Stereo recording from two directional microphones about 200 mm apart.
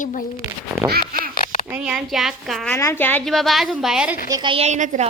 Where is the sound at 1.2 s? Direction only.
40° left (ahead or behind).